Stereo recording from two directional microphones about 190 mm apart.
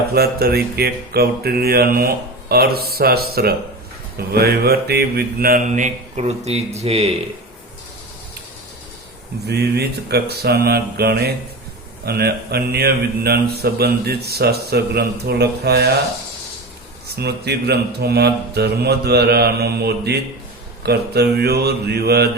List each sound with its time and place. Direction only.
0.1 s speech: 55° right (ahead or behind); by 7.1 s 35° right (ahead or behind)
9.5 s speech: 60° right (ahead or behind)
17.2 s speech: 60° right (ahead or behind)